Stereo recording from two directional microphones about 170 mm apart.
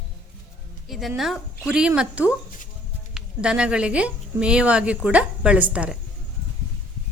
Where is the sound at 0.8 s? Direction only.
Centre (ahead or behind).